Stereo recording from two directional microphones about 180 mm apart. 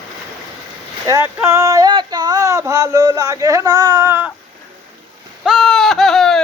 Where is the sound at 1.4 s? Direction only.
15° right (ahead or behind).